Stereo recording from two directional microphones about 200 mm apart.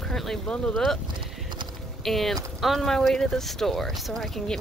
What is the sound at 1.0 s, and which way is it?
Clip-clop, 25° right (ahead or behind).